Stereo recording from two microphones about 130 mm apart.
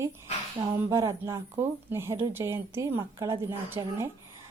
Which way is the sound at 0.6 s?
35° right (ahead or behind).